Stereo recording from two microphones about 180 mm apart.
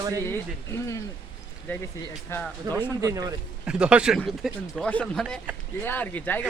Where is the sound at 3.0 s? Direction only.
20° right (ahead or behind).